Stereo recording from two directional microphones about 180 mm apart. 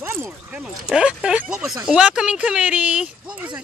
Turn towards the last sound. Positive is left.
turn(degrees=-5)  # may be behind; listen again after turning